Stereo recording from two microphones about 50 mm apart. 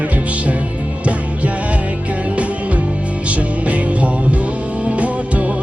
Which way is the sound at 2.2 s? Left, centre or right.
Right.